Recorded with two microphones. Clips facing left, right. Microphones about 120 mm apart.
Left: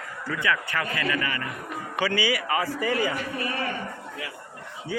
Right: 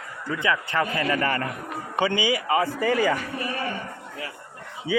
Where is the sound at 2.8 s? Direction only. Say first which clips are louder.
Right 4 dB; 40° right (ahead or behind).